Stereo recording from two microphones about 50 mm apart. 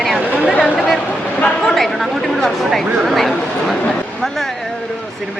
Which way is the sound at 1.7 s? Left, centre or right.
Centre.